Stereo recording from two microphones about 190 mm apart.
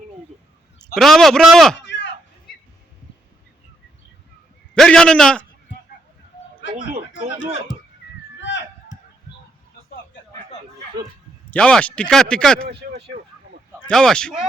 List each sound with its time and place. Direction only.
0.9 s speech: centre (ahead or behind)
1.9 s a sound: 70° left (ahead or behind)
4.7 s a man's voice: 5° left (ahead or behind)
8.4 s a sound: 70° left (ahead or behind)
11.5 s speech: 5° left (ahead or behind)
13.8 s speech: 5° left (ahead or behind)